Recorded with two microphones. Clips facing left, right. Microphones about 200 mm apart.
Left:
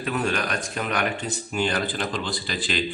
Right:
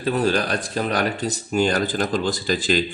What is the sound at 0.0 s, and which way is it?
Speech, 35° right (ahead or behind).